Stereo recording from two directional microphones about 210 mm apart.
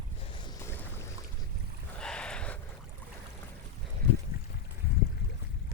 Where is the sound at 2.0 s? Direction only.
5° left (ahead or behind).